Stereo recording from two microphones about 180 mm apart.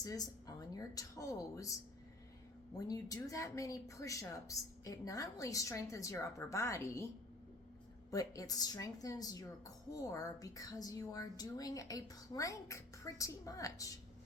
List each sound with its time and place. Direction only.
0.0 s a woman's voice: 20° left (ahead or behind)
2.7 s a woman's voice: 20° left (ahead or behind)
8.1 s a woman's voice: 20° left (ahead or behind)